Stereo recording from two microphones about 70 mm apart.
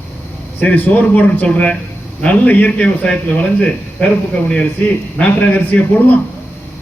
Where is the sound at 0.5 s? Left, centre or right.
Left.